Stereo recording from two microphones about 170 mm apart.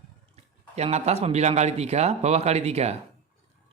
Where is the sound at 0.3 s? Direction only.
40° right (ahead or behind).